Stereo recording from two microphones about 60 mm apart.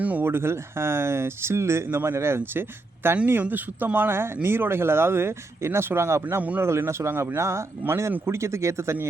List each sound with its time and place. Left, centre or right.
0.0 s speech: right
0.3 s speech: right
3.4 s speech: right